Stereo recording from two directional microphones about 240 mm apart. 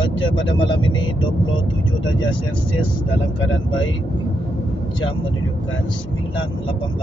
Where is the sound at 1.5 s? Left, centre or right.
Left.